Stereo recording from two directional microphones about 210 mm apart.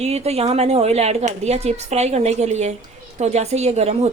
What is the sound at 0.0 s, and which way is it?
Speech, 30° right (ahead or behind).